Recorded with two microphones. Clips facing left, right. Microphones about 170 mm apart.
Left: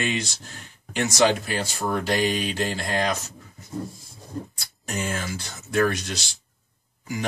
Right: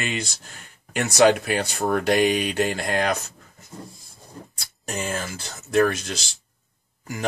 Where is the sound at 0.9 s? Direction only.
60° right (ahead or behind).